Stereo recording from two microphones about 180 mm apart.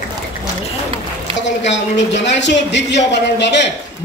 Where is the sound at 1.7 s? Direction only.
80° left.